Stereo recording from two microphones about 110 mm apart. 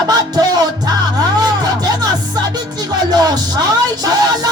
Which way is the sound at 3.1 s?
35° right (ahead or behind).